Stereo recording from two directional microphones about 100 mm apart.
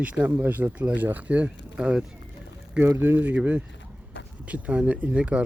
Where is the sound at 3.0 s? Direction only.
20° right (ahead or behind).